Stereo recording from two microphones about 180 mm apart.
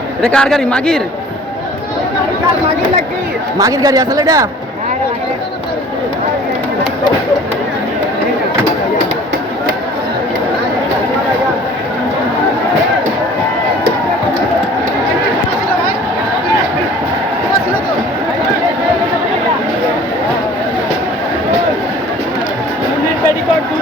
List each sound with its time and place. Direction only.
0.2 s a man's voice: 5° left (ahead or behind)
3.6 s a man's voice: 20° right (ahead or behind)